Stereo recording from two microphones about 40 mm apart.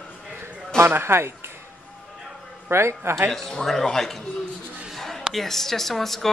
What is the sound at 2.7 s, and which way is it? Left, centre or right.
Speech, right.